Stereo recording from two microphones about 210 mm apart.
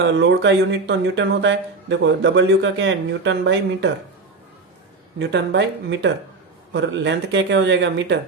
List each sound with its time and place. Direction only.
0.0 s speech: 55° right (ahead or behind)
5.2 s speech: 55° right (ahead or behind)